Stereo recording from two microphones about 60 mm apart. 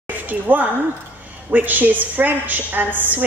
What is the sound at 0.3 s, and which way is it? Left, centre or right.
A woman's voice, right.